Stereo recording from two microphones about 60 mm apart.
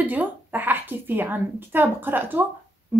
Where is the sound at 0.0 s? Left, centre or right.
Right.